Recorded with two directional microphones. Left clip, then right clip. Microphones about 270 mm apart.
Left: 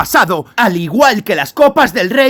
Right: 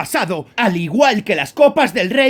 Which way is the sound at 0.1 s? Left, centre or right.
Centre.